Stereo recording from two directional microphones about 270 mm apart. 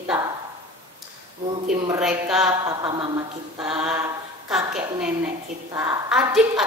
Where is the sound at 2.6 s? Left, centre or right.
Centre.